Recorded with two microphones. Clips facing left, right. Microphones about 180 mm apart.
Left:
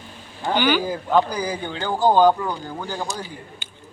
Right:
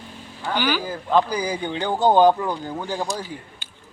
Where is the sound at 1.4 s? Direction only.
15° right (ahead or behind).